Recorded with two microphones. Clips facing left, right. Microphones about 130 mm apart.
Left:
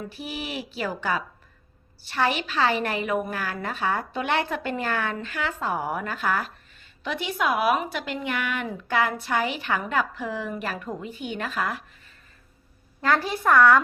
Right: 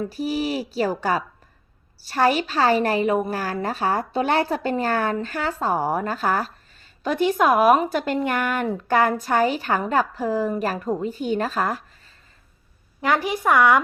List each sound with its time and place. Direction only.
0.0 s a woman's voice: 40° right (ahead or behind)
13.0 s speech: 15° right (ahead or behind)